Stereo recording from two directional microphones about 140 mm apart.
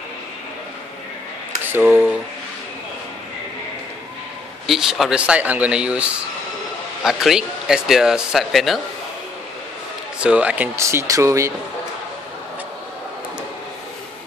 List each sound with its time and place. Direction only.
1.6 s a sound: 15° right (ahead or behind)
4.6 s speech: centre (ahead or behind)
10.2 s speech: 10° right (ahead or behind)